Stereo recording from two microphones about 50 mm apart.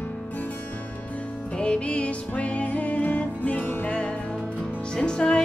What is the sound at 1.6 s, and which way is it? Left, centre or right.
Music, left.